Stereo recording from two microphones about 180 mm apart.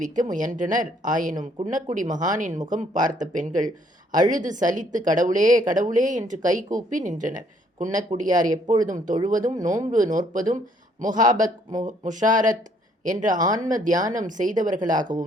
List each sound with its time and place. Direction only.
0.0 s a woman's voice: 45° right (ahead or behind)